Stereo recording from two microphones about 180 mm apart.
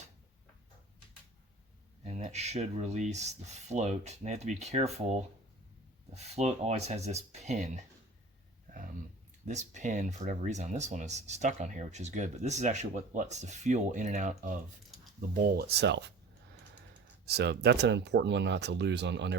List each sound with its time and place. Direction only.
2.0 s speech: 40° right (ahead or behind)
8.7 s a sound: 45° right (ahead or behind)
9.5 s speech: 40° right (ahead or behind)
15.3 s speech: 55° right (ahead or behind)
17.2 s speech: 65° right (ahead or behind)